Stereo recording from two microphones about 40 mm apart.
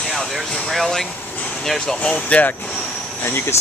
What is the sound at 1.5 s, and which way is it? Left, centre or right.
Speech, centre.